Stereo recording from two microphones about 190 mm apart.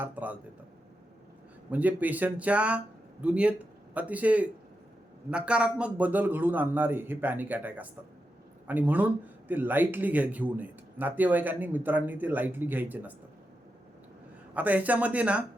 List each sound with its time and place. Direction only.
0.0 s speech: 10° right (ahead or behind)
1.7 s speech: 10° right (ahead or behind)
14.5 s speech: 10° right (ahead or behind)